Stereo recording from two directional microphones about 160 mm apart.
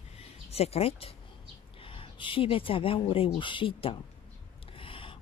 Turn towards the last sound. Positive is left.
turn(degrees=35)  # may be behind; listen again after turning